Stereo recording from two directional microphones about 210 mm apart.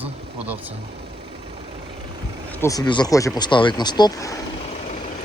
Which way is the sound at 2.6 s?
15° left (ahead or behind).